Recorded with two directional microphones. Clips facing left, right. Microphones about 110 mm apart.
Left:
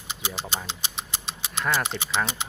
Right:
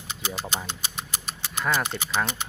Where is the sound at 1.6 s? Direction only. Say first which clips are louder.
Even; centre (ahead or behind).